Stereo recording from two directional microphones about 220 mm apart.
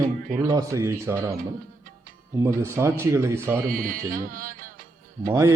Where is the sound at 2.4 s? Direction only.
10° right (ahead or behind).